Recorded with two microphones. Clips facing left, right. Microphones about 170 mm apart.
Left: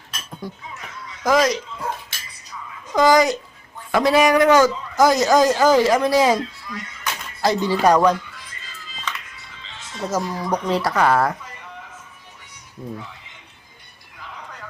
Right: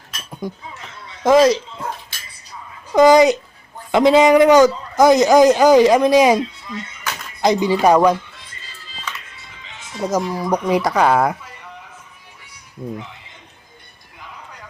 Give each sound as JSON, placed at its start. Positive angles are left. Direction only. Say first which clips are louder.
{"t": 0.7, "sound": "a sound", "louder": "even", "side_deg": -30}
{"t": 3.9, "sound": "speech", "louder": "right 5 dB", "side_deg": -20}
{"t": 9.3, "sound": "speech", "louder": "right 1 dB", "side_deg": -20}
{"t": 12.8, "sound": "speech", "louder": "right 4 dB", "side_deg": -10}